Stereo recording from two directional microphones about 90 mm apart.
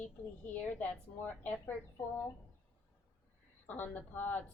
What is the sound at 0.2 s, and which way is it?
Speech, 15° left (ahead or behind).